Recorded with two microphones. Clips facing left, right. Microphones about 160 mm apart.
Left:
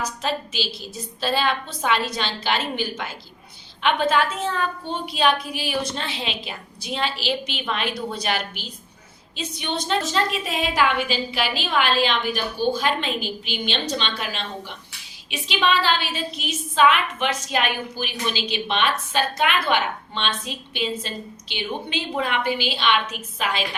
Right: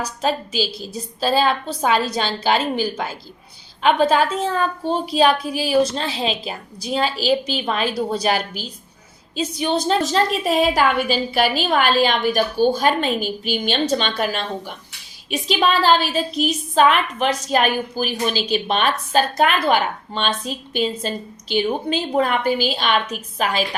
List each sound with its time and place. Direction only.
0.0 s a woman's voice: 40° right (ahead or behind)